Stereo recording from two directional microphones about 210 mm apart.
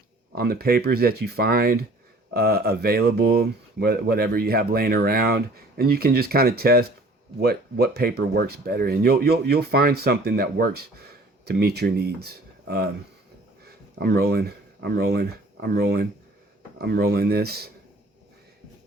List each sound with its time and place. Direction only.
0.3 s speech: 45° right (ahead or behind)
14.0 s speech: 50° right (ahead or behind)